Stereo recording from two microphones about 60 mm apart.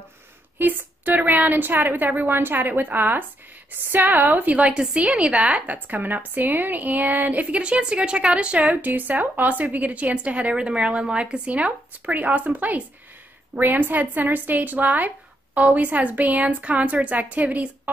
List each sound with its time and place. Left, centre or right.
0.6 s a woman's voice: right